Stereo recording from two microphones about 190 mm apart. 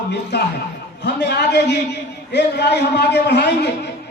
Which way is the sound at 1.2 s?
65° left (ahead or behind).